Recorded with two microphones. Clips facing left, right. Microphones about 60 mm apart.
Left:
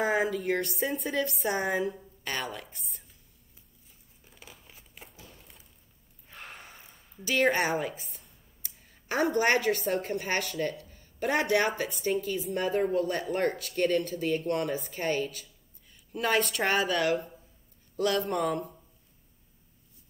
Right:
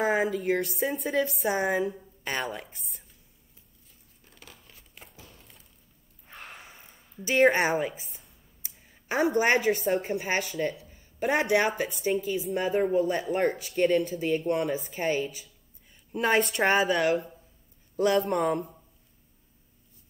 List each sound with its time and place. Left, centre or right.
0.0 s speech: centre
2.2 s a woman's voice: centre
4.2 s crumpling: centre
5.2 s a sound: centre
6.6 s a sound: centre
7.2 s a woman's voice: right
7.9 s a woman's voice: centre; by 16.8 s right
16.8 s speech: centre
17.9 s a woman's voice: right